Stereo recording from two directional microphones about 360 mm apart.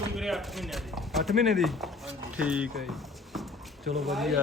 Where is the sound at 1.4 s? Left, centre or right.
Centre.